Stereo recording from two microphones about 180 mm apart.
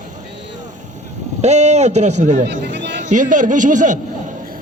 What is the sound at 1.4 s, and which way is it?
A man's voice, 40° right (ahead or behind).